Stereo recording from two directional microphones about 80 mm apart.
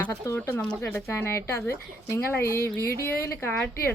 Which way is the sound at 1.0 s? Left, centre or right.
Left.